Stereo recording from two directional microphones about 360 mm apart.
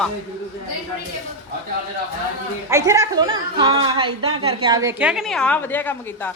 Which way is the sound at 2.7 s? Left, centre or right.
Centre.